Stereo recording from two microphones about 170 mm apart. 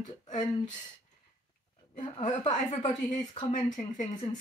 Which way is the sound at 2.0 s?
45° left (ahead or behind).